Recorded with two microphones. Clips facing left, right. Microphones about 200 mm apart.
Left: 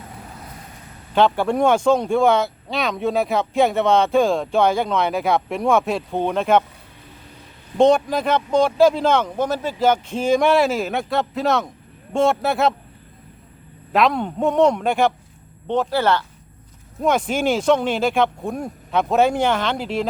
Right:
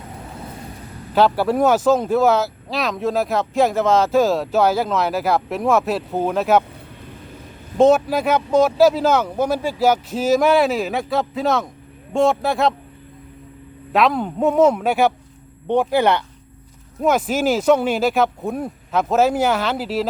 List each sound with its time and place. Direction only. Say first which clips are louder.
1.1 s speech: right 1 dB; 5° right (ahead or behind)
7.8 s speech: right 1 dB; 5° right (ahead or behind)
13.9 s speech: right 1 dB; centre (ahead or behind); by 16.2 s 15° right (ahead or behind)
17.0 s speech: right 1 dB; 5° right (ahead or behind)